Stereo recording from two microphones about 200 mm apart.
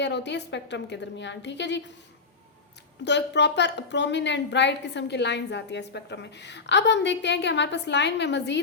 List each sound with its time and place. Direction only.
0.0 s a woman's voice: 60° left (ahead or behind)
3.0 s a woman's voice: 60° left (ahead or behind)